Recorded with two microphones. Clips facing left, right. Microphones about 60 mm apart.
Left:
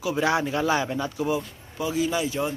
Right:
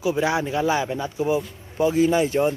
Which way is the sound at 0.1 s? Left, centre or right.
Centre.